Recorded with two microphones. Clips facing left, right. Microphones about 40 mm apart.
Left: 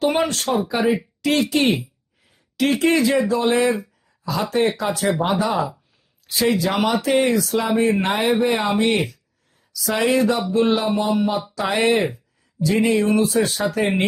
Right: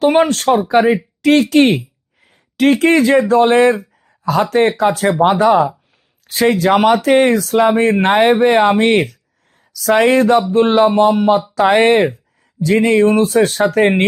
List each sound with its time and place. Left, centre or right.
0.0 s speech: right